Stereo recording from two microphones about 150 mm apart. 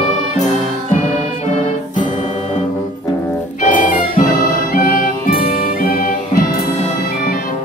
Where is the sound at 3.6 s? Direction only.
65° left (ahead or behind).